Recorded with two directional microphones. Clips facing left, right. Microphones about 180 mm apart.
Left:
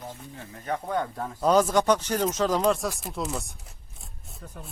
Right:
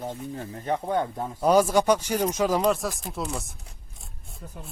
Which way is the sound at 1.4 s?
10° right (ahead or behind).